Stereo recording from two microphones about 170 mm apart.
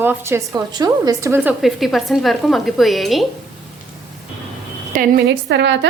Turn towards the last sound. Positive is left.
turn(degrees=-90)